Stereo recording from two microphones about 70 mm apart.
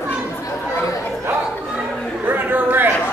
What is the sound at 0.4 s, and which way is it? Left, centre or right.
Chatter, left.